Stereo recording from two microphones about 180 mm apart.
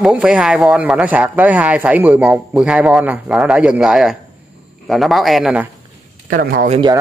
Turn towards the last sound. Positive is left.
turn(degrees=-30)  # may be behind; listen again after turning